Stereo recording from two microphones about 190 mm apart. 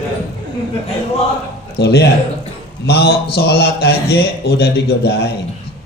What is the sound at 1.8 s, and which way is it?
A man's voice, 60° left (ahead or behind).